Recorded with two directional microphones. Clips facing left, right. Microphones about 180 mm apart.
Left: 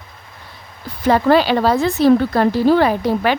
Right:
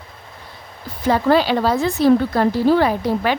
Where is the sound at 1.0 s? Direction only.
70° left (ahead or behind).